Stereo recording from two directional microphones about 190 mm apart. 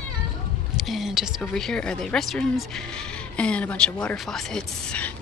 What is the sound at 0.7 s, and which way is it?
Speech, centre (ahead or behind).